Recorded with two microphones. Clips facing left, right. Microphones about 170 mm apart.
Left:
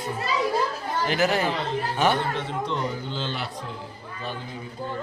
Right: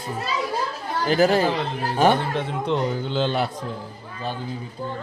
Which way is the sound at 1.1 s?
35° right (ahead or behind).